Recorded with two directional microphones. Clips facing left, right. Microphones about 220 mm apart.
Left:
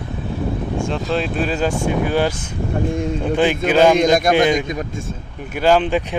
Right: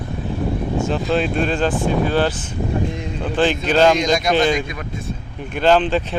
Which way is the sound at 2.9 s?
50° left (ahead or behind).